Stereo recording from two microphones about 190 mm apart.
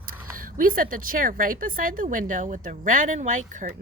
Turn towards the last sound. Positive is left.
turn(degrees=-40)  # may be behind; listen again after turning